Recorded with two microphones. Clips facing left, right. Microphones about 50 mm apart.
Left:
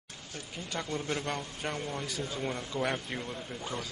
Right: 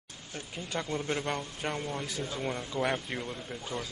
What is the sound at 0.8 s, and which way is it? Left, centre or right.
Speech, centre.